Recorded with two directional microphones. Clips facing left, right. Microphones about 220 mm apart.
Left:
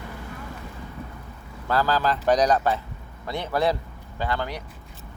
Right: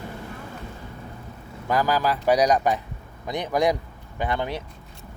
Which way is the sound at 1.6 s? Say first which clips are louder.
Right 1 dB; 15° right (ahead or behind).